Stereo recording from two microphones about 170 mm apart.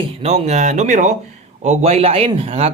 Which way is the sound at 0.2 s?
40° right (ahead or behind).